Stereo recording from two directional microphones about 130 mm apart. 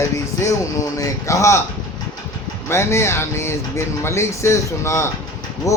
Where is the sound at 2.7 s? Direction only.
20° left (ahead or behind).